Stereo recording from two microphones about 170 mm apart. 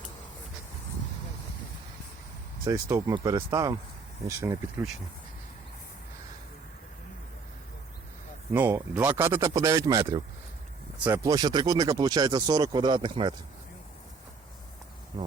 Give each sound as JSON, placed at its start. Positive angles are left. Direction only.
{"t": 2.6, "sound": "speech", "side_deg": -20}
{"t": 8.5, "sound": "speech", "side_deg": -10}